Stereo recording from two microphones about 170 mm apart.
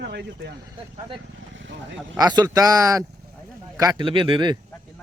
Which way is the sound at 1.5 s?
90° right.